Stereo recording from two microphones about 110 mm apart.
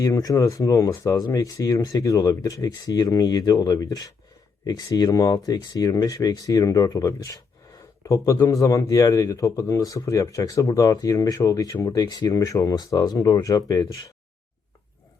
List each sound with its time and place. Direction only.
0.0 s a man's voice: 35° left (ahead or behind)